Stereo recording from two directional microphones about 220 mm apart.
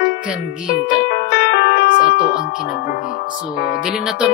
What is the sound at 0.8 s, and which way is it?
Music, 45° left (ahead or behind).